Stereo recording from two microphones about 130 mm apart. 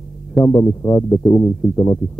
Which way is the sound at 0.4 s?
20° left (ahead or behind).